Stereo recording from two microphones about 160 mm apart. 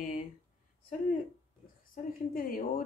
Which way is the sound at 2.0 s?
55° left (ahead or behind).